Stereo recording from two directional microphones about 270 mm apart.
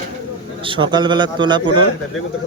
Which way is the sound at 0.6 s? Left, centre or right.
Centre.